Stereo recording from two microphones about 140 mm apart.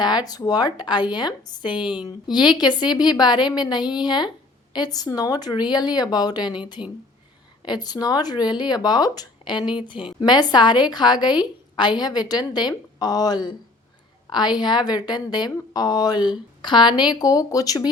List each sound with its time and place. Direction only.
0.0 s a woman's voice: 30° left (ahead or behind)
6.8 s speech: 10° right (ahead or behind)
7.6 s a woman's voice: 30° left (ahead or behind)